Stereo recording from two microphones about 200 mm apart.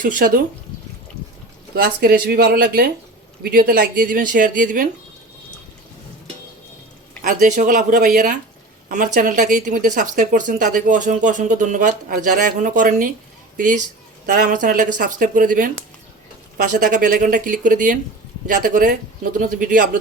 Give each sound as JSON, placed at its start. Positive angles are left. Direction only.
{"t": 0.0, "sound": "a man's voice", "side_deg": -45}
{"t": 1.7, "sound": "a man's voice", "side_deg": -50}
{"t": 7.3, "sound": "a man's voice", "side_deg": -40}
{"t": 14.3, "sound": "a man's voice", "side_deg": -40}